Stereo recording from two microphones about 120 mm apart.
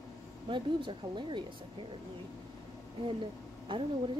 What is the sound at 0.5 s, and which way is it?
Speech, 40° right (ahead or behind).